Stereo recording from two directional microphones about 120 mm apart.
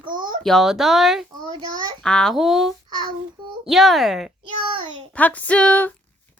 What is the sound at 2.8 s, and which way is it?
Child singing, 35° right (ahead or behind).